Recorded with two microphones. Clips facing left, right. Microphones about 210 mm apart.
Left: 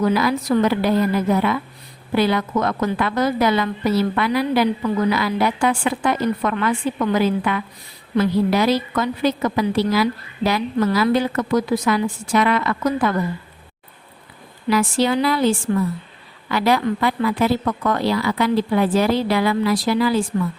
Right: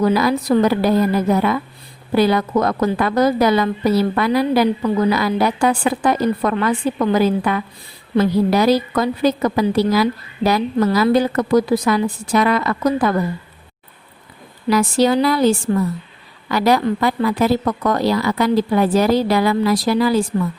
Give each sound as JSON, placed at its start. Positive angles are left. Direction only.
{"t": 0.0, "sound": "a woman's voice", "side_deg": -40}
{"t": 14.7, "sound": "a woman's voice", "side_deg": -40}